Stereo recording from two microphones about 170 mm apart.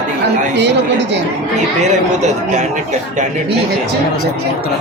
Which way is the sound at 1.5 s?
45° right (ahead or behind).